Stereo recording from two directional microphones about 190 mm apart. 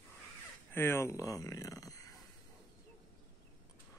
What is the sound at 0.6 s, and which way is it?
Speech, 10° left (ahead or behind).